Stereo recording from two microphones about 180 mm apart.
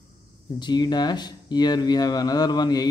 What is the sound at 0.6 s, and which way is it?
Speech, 25° left (ahead or behind).